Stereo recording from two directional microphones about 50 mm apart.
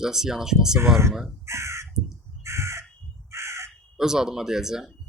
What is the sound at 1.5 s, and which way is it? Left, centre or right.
Crow, right.